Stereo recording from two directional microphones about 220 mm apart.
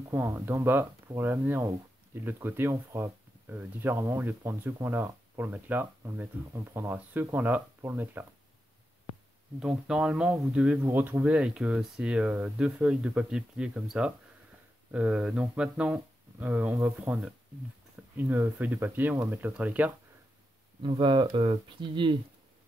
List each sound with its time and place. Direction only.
0.1 s speech: 10° right (ahead or behind)
9.6 s speech: 5° right (ahead or behind)
20.8 s speech: 20° right (ahead or behind)